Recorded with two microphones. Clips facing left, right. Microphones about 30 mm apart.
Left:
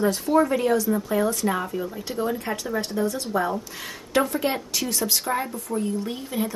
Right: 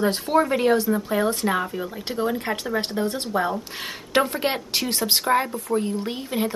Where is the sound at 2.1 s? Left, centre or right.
Right.